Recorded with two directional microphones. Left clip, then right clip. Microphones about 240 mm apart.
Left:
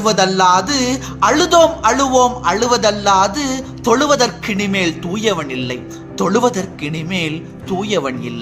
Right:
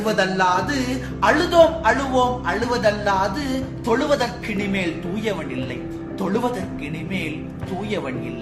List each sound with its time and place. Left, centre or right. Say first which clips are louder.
0.0 s a man's voice: left 7 dB; left